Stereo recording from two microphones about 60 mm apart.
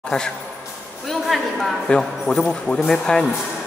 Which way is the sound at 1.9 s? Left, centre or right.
Centre.